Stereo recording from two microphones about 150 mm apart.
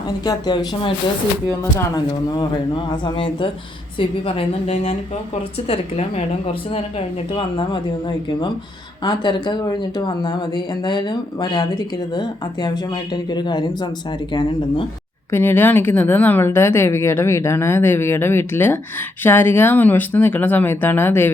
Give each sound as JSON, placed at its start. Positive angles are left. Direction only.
{"t": 0.3, "sound": "speech", "side_deg": 25}
{"t": 2.0, "sound": "a woman's voice", "side_deg": 30}
{"t": 9.0, "sound": "speech", "side_deg": 30}
{"t": 15.3, "sound": "a woman's voice", "side_deg": 15}